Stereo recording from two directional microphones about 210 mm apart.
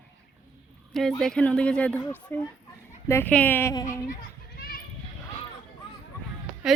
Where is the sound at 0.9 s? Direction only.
Centre (ahead or behind).